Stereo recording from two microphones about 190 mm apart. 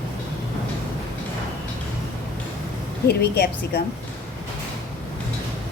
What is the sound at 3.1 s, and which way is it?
Speech, 55° left (ahead or behind).